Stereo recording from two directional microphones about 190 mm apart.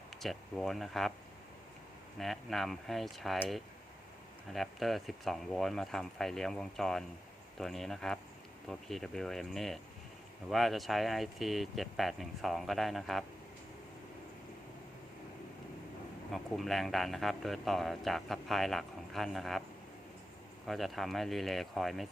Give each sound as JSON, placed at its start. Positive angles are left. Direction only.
{"t": 0.1, "sound": "speech", "side_deg": 0}
{"t": 2.1, "sound": "speech", "side_deg": 0}
{"t": 16.3, "sound": "speech", "side_deg": 0}
{"t": 20.7, "sound": "speech", "side_deg": 0}